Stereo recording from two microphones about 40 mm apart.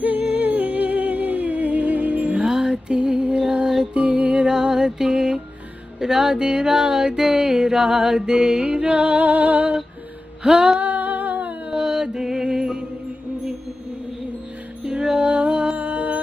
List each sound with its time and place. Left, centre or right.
0.0 s music: right
2.3 s music: centre
9.2 s a sound: right
10.4 s music: centre
10.8 s humming: right
11.7 s music: centre
14.9 s music: centre
15.8 s music: right